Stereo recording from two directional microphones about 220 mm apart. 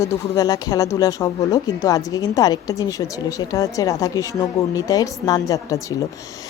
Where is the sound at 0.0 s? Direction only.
15° left (ahead or behind).